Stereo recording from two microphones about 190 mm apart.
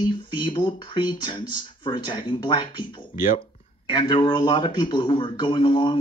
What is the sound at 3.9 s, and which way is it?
A man's voice, 25° left (ahead or behind).